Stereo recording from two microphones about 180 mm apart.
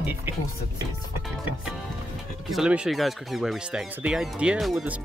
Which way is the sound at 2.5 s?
5° right (ahead or behind).